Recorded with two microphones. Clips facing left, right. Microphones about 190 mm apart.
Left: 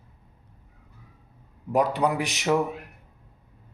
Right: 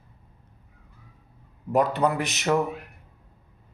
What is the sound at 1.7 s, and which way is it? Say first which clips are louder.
Speech: right 1 dB; 10° left (ahead or behind).